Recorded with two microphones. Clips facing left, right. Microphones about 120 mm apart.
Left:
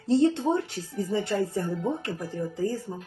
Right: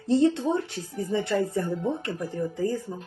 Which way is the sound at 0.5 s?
30° right (ahead or behind).